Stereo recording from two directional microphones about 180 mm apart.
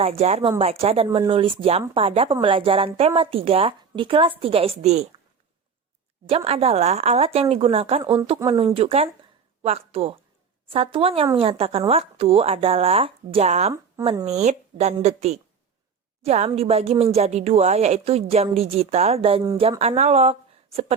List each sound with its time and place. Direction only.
0.0 s a woman's voice: 35° right (ahead or behind)
6.2 s a woman's voice: 35° right (ahead or behind)